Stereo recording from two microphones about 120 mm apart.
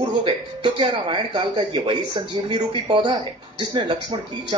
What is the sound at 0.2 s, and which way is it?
Speech, 40° right (ahead or behind).